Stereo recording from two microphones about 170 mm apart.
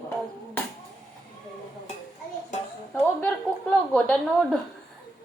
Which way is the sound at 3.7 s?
5° left (ahead or behind).